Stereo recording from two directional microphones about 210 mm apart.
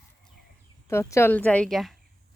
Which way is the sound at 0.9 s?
15° left (ahead or behind).